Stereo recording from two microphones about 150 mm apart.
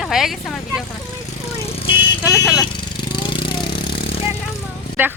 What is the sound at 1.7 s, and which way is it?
Vehicle, 40° left (ahead or behind).